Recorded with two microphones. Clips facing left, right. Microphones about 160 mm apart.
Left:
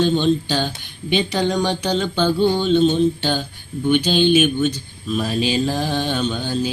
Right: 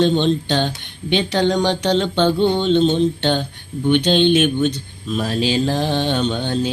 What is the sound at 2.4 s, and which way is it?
Mantra, 25° right (ahead or behind).